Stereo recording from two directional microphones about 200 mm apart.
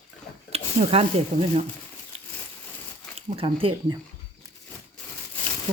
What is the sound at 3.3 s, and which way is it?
Speech, 25° right (ahead or behind).